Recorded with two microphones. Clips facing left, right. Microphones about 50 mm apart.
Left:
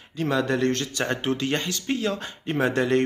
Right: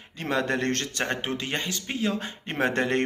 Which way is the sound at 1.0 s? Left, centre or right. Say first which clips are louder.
Left 6 dB; right.